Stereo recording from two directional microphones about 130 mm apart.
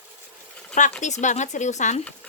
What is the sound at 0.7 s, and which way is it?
Speech, 70° left (ahead or behind).